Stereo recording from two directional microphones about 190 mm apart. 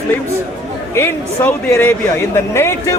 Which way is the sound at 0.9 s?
15° left (ahead or behind).